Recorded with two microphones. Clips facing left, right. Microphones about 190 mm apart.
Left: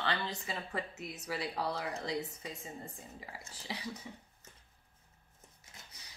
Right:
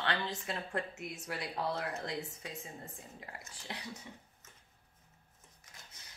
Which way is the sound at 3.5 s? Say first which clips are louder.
Left 3 dB; centre (ahead or behind).